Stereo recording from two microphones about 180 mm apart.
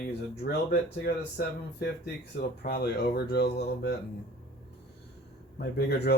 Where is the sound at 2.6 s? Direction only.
60° left (ahead or behind).